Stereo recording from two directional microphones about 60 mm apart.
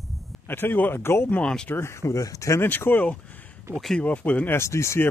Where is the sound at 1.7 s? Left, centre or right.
Left.